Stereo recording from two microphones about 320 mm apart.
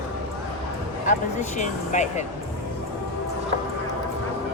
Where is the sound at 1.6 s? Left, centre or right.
Left.